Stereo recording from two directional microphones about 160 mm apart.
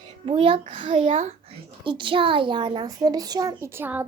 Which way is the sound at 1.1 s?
45° right (ahead or behind).